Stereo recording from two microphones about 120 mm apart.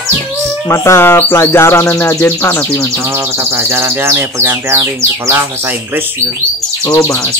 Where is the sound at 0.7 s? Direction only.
20° left (ahead or behind).